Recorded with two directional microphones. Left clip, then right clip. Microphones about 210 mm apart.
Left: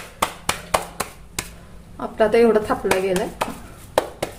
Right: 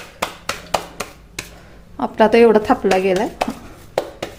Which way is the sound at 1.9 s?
40° right (ahead or behind).